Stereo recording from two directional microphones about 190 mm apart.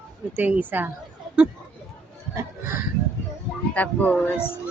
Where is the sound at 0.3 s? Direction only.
10° right (ahead or behind).